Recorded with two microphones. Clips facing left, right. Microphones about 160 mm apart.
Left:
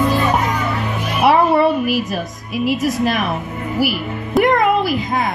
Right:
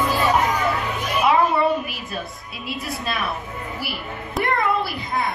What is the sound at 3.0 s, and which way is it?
Speech, 90° left.